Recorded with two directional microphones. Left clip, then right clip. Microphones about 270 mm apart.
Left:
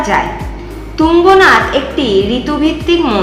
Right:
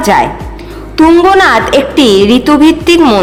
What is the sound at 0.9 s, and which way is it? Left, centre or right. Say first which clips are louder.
A woman's voice: right 2 dB; right.